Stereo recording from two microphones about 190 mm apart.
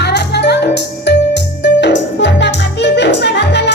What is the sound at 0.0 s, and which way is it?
Music, 60° left (ahead or behind).